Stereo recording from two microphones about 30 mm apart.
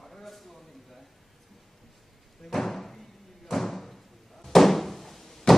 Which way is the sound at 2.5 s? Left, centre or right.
Centre.